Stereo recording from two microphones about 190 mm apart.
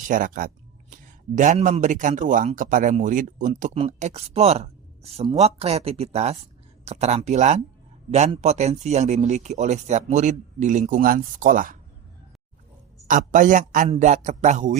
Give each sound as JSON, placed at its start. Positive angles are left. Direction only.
{"t": 0.1, "sound": "speech", "side_deg": -45}
{"t": 13.1, "sound": "speech", "side_deg": -40}